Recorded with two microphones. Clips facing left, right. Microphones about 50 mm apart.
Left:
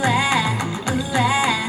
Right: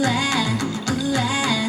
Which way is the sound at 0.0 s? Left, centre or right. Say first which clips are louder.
Left 2 dB; left.